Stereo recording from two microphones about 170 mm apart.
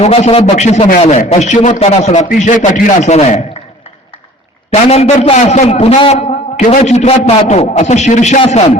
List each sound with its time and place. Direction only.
0.0 s a man's voice: 35° left (ahead or behind)
4.7 s a man's voice: 40° left (ahead or behind)